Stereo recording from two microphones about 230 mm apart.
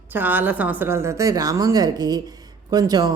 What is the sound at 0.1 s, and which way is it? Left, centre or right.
A woman's voice, centre.